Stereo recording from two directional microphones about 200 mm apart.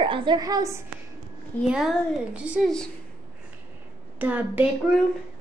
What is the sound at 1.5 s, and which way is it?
Speech, 10° left (ahead or behind).